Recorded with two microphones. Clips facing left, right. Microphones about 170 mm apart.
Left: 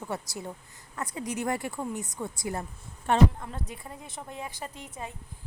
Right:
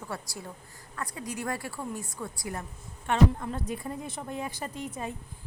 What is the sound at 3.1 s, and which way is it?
Speech, 35° left (ahead or behind).